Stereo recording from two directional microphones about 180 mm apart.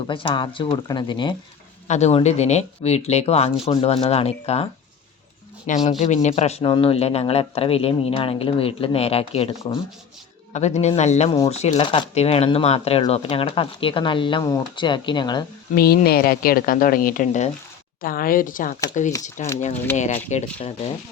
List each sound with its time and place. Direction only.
0.1 s speech: 30° left (ahead or behind)
1.9 s speech: 35° left (ahead or behind)
11.8 s speech: 25° left (ahead or behind)
15.7 s a woman's voice: 60° left (ahead or behind); by 20.9 s 35° left (ahead or behind)